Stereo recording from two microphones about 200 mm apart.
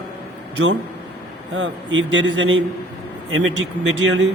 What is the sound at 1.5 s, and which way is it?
A man's voice, 65° right (ahead or behind).